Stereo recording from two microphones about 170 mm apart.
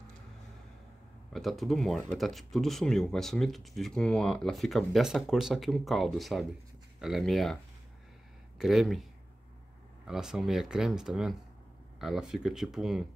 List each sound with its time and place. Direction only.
1.3 s speech: centre (ahead or behind)
8.5 s speech: centre (ahead or behind)
10.0 s speech: centre (ahead or behind)